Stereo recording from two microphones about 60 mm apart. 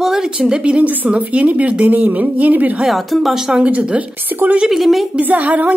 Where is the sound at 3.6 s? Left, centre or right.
Right.